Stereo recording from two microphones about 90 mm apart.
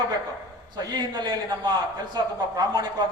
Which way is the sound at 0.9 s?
50° right (ahead or behind).